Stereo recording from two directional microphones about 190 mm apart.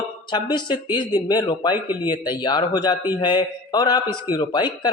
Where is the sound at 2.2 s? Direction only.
25° left (ahead or behind).